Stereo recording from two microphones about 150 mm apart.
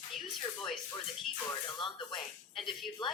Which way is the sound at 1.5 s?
30° left (ahead or behind).